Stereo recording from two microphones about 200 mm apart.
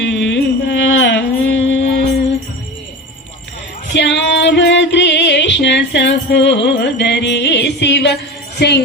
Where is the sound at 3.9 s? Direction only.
65° left (ahead or behind).